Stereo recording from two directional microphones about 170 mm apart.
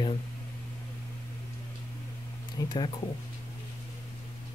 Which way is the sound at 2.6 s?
20° left (ahead or behind).